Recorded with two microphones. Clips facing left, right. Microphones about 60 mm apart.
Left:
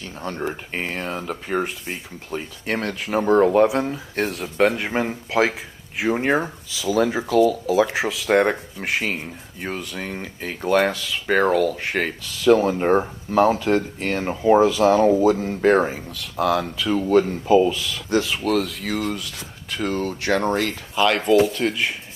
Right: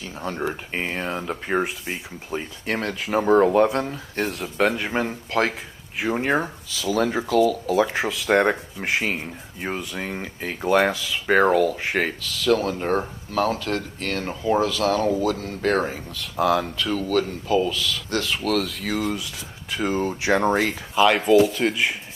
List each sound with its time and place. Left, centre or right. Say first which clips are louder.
0.0 s speech: even; centre
1.2 s speech: right 1 dB; right
1.6 s speech: even; centre
12.2 s speech: left 5 dB; centre
16.2 s speech: even; centre
16.9 s speech: left 6 dB; centre
18.2 s speech: left 2 dB; centre
19.7 s speech: right 1 dB; centre